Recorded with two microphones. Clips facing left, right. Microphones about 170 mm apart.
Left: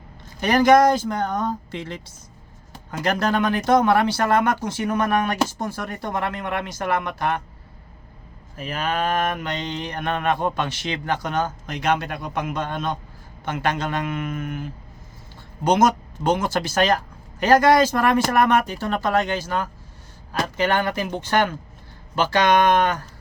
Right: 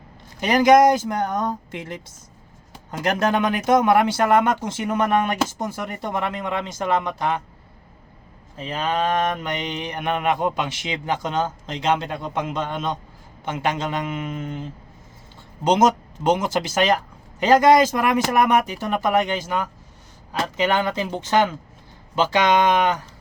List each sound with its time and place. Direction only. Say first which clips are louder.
0.3 s speech: right 1 dB; 15° right (ahead or behind)
3.2 s mantra: right 1 dB; 20° right (ahead or behind)
8.5 s mantra: right 1 dB; 25° right (ahead or behind)
17.4 s speech: right 1 dB; 20° right (ahead or behind)
20.6 s mantra: right 1 dB; 15° right (ahead or behind)